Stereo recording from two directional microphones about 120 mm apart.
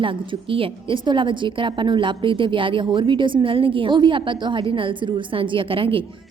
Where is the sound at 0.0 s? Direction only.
45° right (ahead or behind).